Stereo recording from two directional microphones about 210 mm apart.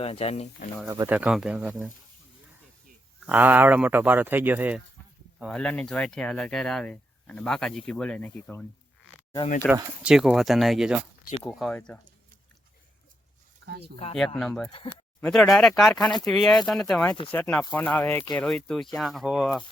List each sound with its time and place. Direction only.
0.0 s speech: 30° left (ahead or behind)
0.9 s speech: 10° right (ahead or behind)
3.2 s speech: 10° right (ahead or behind)
5.4 s speech: centre (ahead or behind)
9.6 s speech: 5° left (ahead or behind)
13.7 s speech: 50° right (ahead or behind)
14.3 s speech: centre (ahead or behind)